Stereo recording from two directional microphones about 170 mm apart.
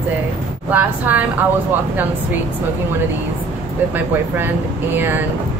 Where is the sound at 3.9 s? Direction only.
10° right (ahead or behind).